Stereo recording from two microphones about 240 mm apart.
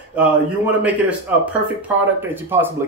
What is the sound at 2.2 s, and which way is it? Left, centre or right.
Speech, centre.